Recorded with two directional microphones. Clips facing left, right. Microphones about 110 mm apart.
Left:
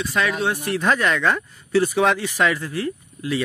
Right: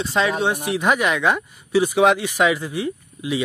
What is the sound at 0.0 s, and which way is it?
Speech, 25° right (ahead or behind).